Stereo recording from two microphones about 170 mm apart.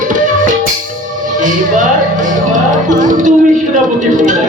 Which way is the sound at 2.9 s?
50° right (ahead or behind).